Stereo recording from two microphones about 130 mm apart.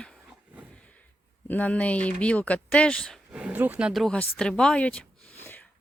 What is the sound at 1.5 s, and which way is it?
Speech, 10° left (ahead or behind).